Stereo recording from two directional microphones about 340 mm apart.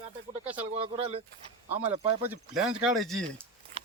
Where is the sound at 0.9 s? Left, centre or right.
Centre.